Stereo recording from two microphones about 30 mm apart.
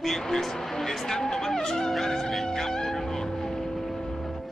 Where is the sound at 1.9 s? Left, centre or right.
Centre.